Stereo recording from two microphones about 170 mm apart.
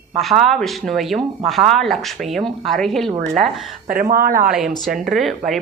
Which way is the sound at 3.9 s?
55° right (ahead or behind).